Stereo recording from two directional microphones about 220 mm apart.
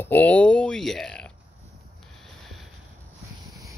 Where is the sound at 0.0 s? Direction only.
10° left (ahead or behind).